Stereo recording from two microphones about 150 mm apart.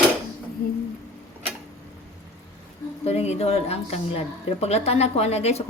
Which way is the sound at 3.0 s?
45° left (ahead or behind).